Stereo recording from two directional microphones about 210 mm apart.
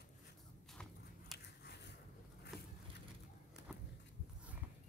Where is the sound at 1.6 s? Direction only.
50° left (ahead or behind).